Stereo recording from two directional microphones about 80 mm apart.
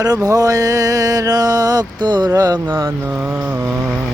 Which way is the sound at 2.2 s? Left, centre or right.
Right.